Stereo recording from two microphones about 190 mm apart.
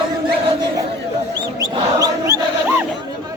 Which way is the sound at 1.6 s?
15° right (ahead or behind).